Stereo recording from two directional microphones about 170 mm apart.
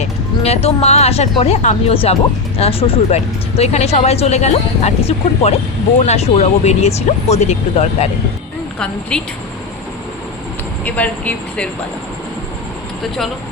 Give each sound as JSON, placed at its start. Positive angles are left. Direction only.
{"t": 0.0, "sound": "speech", "side_deg": 35}
{"t": 8.8, "sound": "a woman's voice", "side_deg": 5}
{"t": 10.8, "sound": "speech", "side_deg": 10}